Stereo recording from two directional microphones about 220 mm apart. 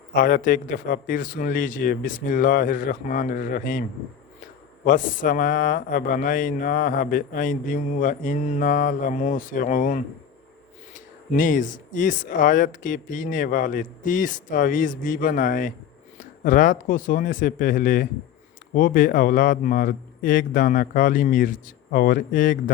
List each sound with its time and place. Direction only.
0.1 s a man's voice: 40° left (ahead or behind)
4.9 s a man's voice: 35° left (ahead or behind)